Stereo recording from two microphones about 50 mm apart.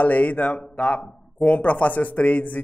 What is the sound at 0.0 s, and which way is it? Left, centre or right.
A man's voice, left.